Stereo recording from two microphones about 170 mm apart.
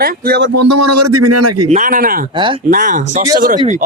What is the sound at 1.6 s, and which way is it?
Speech, 45° right (ahead or behind).